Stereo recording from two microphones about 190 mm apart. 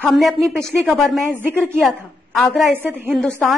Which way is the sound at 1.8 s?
Centre (ahead or behind).